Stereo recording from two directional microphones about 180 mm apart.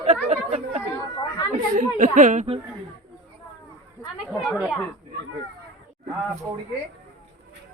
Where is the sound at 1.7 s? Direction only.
45° right (ahead or behind).